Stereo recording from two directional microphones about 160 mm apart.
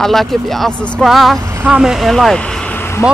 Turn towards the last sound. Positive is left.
turn(degrees=15)  # may be behind; listen again after turning